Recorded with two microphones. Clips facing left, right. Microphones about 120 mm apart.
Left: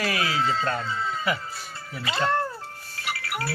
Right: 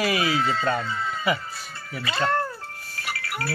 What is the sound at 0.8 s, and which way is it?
Speech, 30° left (ahead or behind).